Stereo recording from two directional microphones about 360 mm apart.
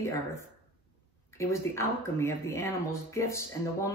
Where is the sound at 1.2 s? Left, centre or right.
Centre.